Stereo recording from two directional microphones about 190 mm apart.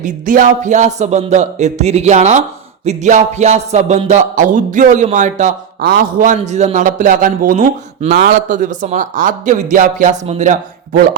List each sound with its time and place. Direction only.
0.0 s a man's voice: 45° right (ahead or behind)
5.8 s a man's voice: 50° right (ahead or behind)